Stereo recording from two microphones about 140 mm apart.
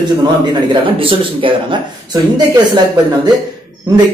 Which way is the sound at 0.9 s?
40° right (ahead or behind).